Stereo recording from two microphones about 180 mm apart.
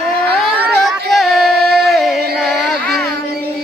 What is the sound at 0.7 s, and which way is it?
Music, centre (ahead or behind).